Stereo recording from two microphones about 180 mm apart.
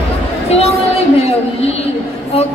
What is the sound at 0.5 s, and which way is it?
A woman's voice, 35° left (ahead or behind).